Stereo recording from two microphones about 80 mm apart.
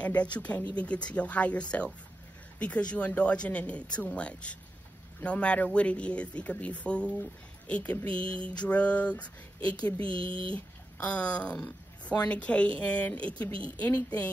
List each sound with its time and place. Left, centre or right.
0.0 s speech: centre